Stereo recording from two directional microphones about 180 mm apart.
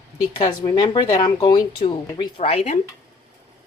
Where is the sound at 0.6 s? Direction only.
25° left (ahead or behind).